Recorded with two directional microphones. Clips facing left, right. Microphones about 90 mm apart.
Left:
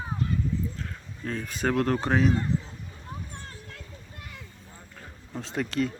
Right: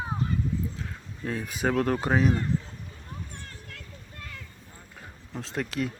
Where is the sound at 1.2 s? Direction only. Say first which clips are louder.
Right 1 dB; 5° right (ahead or behind).